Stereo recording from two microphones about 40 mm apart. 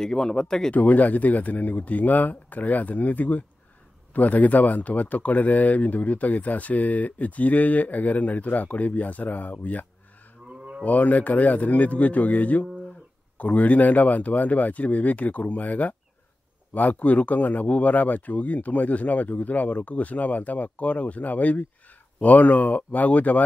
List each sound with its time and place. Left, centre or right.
0.0 s speech: centre
0.7 s speech: left